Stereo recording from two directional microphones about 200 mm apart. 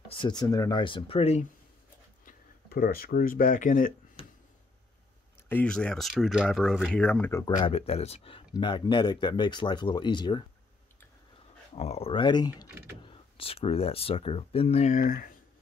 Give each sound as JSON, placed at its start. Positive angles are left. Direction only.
{"t": 0.1, "sound": "speech", "side_deg": 20}
{"t": 2.2, "sound": "speech", "side_deg": 50}
{"t": 5.5, "sound": "speech", "side_deg": 5}
{"t": 11.7, "sound": "speech", "side_deg": 30}